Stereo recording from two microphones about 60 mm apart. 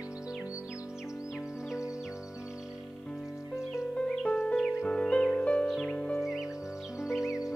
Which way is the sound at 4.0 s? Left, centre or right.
Centre.